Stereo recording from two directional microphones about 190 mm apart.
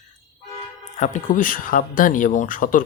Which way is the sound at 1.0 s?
40° left (ahead or behind).